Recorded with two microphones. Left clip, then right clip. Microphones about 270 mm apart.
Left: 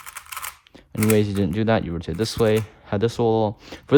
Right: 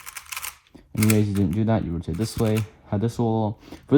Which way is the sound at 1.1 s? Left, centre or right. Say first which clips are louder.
Left 6 dB; right.